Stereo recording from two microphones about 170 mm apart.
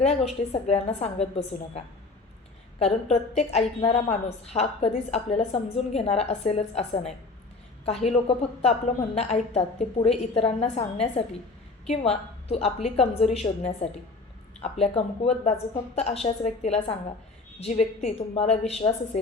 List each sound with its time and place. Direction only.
0.5 s a woman's voice: 35° left (ahead or behind)